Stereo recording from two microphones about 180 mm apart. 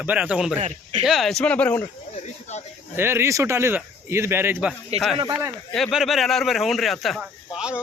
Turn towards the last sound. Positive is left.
turn(degrees=-5)  # may be behind; listen again after turning